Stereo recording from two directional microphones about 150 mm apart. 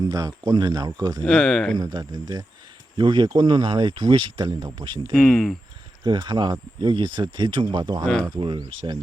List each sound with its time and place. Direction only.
0.0 s speech: 25° right (ahead or behind)
1.2 s speech: 5° left (ahead or behind)
1.8 s speech: 25° right (ahead or behind)
5.1 s speech: 5° left (ahead or behind)
6.1 s speech: 30° right (ahead or behind)
8.0 s speech: 5° left (ahead or behind)
8.3 s speech: 30° right (ahead or behind)